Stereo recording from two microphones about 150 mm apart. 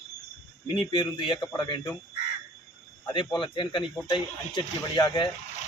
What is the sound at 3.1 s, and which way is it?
A man's voice, 30° left (ahead or behind).